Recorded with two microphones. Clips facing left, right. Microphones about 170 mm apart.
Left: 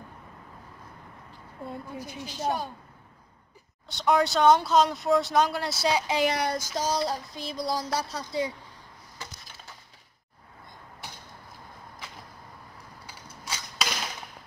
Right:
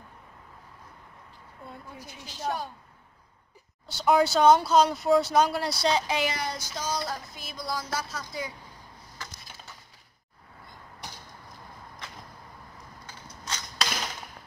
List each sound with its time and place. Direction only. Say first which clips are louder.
2.0 s a woman's voice: left 2 dB; 15° left (ahead or behind)
3.8 s speech: right 1 dB; centre (ahead or behind)
6.2 s child singing: left 5 dB; 60° left (ahead or behind)
6.7 s a sound: left 4 dB; 35° left (ahead or behind)
13.0 s arrow: even; 10° left (ahead or behind)